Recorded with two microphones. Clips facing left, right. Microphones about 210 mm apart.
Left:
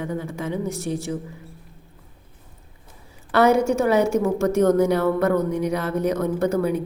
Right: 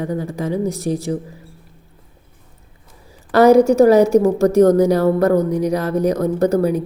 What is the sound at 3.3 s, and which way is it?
A woman's voice, 40° right (ahead or behind).